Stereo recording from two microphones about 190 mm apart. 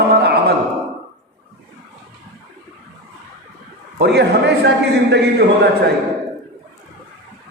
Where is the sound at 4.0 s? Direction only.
60° right (ahead or behind).